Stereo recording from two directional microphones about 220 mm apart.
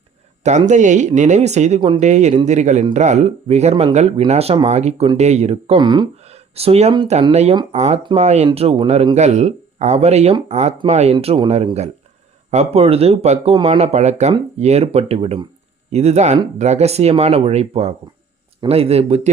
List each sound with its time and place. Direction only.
0.7 s speech: 35° right (ahead or behind)